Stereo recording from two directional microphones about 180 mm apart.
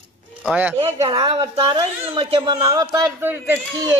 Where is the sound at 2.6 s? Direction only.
20° right (ahead or behind).